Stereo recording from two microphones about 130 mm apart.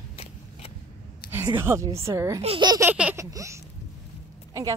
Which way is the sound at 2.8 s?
10° right (ahead or behind).